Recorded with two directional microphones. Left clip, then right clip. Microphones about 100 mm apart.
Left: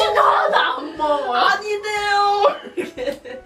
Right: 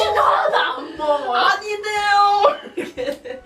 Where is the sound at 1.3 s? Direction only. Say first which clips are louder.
Even; 15° right (ahead or behind).